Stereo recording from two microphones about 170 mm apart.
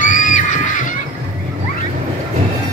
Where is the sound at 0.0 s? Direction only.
50° left (ahead or behind).